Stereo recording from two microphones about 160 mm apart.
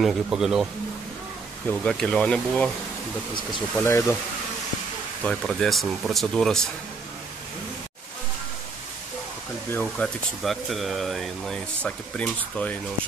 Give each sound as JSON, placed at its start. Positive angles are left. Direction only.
{"t": 0.0, "sound": "speech", "side_deg": 0}
{"t": 1.7, "sound": "speech", "side_deg": 5}
{"t": 3.8, "sound": "speech", "side_deg": 15}
{"t": 5.2, "sound": "speech", "side_deg": 5}
{"t": 9.7, "sound": "speech", "side_deg": 10}